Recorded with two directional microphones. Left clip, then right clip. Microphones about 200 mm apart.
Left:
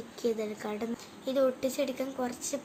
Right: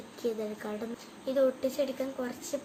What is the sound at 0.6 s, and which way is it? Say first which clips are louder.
A woman's voice: left 2 dB; 35° left (ahead or behind).